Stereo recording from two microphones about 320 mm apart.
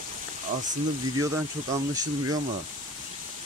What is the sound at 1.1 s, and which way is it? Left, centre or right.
Speech, centre.